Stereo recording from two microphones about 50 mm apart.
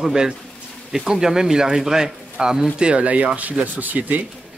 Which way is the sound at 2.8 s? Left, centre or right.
Right.